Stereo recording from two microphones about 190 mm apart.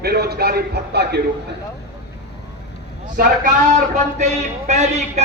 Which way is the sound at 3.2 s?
40° right (ahead or behind).